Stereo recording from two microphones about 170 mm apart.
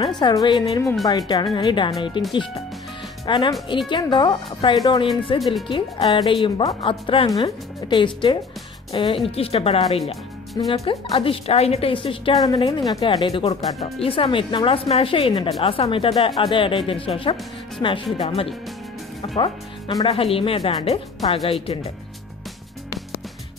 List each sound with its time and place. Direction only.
0.2 s speech: 25° left (ahead or behind)
3.3 s a woman's voice: 30° left (ahead or behind)
17.8 s speech: 20° left (ahead or behind)
18.1 s a woman's voice: 35° left (ahead or behind)